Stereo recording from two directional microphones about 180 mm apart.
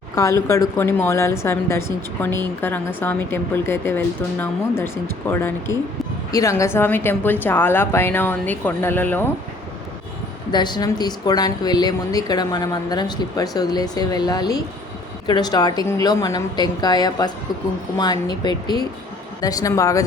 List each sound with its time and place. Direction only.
0.2 s speech: 15° left (ahead or behind)
10.5 s speech: 25° left (ahead or behind)